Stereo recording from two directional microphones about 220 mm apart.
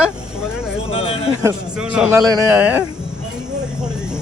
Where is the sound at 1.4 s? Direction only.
5° right (ahead or behind).